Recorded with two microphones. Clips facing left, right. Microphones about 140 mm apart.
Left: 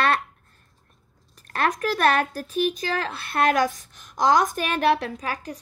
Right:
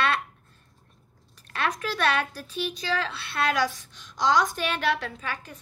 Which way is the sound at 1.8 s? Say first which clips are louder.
Left 5 dB; 45° left (ahead or behind).